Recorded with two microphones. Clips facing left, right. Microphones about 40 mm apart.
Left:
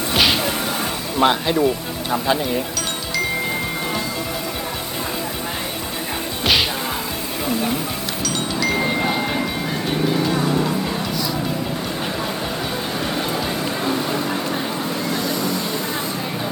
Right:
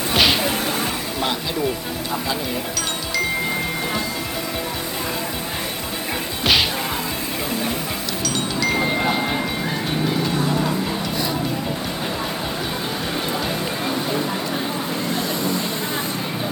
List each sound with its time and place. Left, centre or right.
0.1 s music: centre
1.2 s speech: left
6.4 s whack: centre
8.2 s chime: centre
10.3 s music: centre
15.2 s vehicle: right